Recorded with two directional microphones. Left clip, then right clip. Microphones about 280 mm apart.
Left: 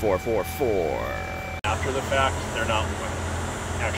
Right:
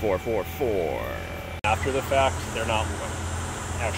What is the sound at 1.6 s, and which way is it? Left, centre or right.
Vehicle, right.